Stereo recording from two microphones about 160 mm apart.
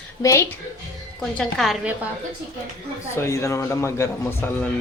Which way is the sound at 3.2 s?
15° left (ahead or behind).